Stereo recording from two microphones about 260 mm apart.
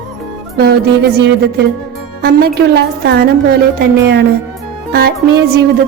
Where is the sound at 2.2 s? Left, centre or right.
Right.